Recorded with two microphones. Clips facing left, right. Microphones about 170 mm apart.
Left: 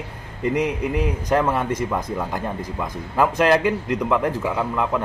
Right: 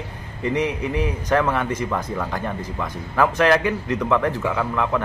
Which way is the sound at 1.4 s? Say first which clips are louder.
Left 1 dB; 10° left (ahead or behind).